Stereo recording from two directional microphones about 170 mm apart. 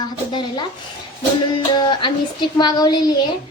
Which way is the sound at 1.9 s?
25° left (ahead or behind).